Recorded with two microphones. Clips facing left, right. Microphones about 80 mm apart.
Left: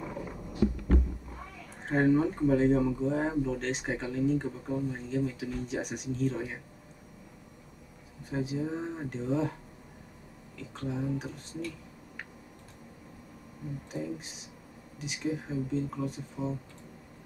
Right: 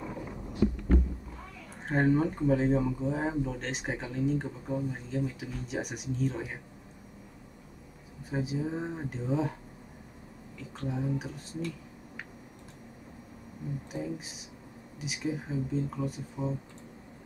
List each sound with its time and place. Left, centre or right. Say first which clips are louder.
0.0 s vehicle: even; centre
1.9 s speech: left 1 dB; centre
8.3 s speech: even; centre
10.8 s speech: even; centre
15.0 s speech: even; centre